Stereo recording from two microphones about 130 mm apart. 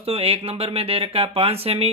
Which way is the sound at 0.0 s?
50° right (ahead or behind).